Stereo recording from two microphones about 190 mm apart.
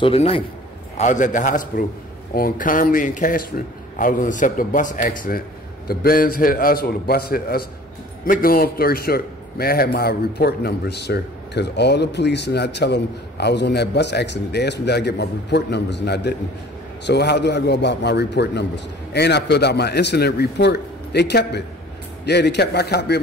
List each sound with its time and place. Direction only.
0.0 s a man's voice: 30° left (ahead or behind)
0.9 s a man's voice: 40° left (ahead or behind); by 23.1 s 60° left (ahead or behind)